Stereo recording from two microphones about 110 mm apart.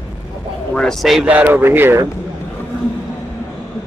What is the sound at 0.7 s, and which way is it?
Speech, 5° left (ahead or behind).